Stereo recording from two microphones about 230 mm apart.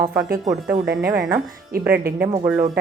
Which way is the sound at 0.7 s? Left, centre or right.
Right.